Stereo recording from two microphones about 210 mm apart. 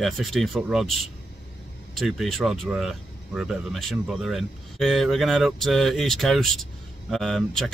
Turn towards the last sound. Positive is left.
turn(degrees=0)  # may be behind; listen again after turning